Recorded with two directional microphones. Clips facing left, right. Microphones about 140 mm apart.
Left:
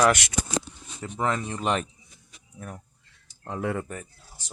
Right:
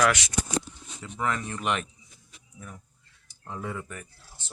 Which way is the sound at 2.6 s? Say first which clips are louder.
Left 5 dB; 60° left (ahead or behind).